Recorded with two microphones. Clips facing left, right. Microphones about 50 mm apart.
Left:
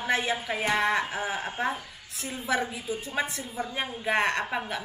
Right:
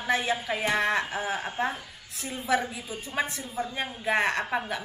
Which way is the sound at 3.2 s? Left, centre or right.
Centre.